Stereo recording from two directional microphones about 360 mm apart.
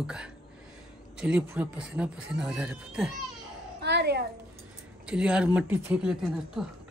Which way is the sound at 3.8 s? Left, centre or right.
Right.